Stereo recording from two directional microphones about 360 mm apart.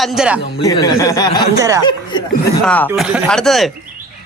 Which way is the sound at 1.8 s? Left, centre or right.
Centre.